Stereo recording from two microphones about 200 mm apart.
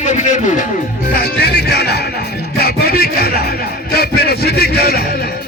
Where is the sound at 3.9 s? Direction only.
50° left (ahead or behind).